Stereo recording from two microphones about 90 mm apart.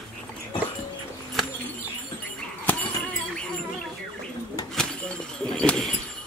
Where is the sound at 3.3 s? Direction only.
10° left (ahead or behind).